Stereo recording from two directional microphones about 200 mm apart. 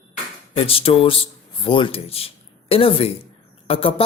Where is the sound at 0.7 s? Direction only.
30° left (ahead or behind).